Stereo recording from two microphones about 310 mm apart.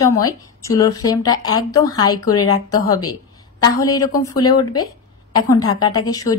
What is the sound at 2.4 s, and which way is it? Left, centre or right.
Speech, left.